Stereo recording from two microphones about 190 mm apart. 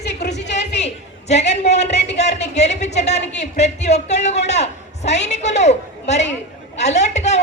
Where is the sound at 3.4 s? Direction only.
35° left (ahead or behind).